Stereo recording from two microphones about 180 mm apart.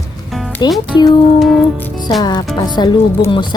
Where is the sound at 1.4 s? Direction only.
Centre (ahead or behind).